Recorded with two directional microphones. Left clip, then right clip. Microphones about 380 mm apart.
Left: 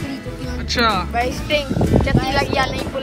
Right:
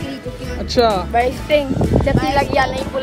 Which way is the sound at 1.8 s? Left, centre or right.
Centre.